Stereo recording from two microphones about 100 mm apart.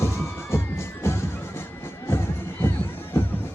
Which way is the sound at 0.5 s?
25° left (ahead or behind).